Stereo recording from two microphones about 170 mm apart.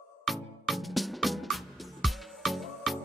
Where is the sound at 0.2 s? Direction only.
Centre (ahead or behind).